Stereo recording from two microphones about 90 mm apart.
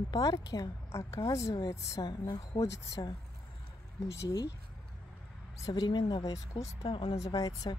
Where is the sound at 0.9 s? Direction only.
35° left (ahead or behind).